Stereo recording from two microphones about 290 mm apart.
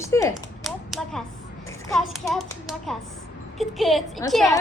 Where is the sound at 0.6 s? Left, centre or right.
Centre.